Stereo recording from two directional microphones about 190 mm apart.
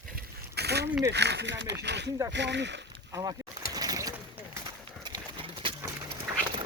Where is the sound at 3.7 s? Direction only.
20° right (ahead or behind).